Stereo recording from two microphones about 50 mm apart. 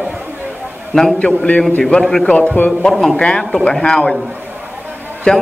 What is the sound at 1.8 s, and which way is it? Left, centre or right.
Speech, centre.